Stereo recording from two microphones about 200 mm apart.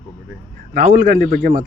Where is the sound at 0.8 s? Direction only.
40° right (ahead or behind).